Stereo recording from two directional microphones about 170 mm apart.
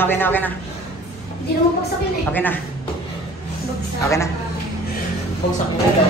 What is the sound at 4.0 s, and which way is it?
Speech, 15° left (ahead or behind).